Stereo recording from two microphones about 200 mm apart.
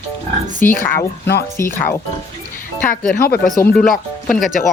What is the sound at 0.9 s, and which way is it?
Speech, 55° left (ahead or behind).